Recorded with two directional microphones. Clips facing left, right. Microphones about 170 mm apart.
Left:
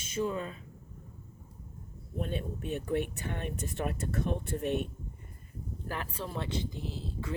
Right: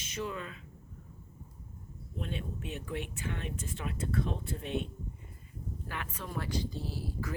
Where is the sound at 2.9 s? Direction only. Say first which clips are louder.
Left 6 dB; 50° left (ahead or behind).